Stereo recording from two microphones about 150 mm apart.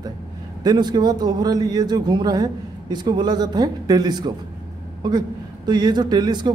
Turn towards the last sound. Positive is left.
turn(degrees=-30)  # may be behind; listen again after turning